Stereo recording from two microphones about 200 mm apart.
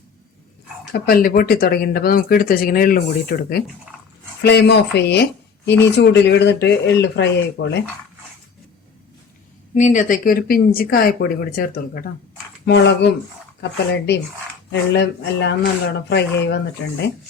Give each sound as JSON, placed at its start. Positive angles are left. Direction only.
{"t": 0.9, "sound": "speech", "side_deg": 50}
{"t": 4.4, "sound": "speech", "side_deg": 55}
{"t": 9.7, "sound": "speech", "side_deg": 40}
{"t": 12.6, "sound": "speech", "side_deg": 60}
{"t": 14.7, "sound": "speech", "side_deg": 60}